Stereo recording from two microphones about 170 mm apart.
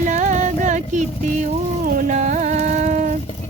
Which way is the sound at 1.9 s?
50° right (ahead or behind).